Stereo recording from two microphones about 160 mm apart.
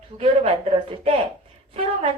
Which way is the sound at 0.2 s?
35° right (ahead or behind).